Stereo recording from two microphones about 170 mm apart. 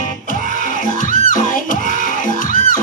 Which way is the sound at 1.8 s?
50° left (ahead or behind).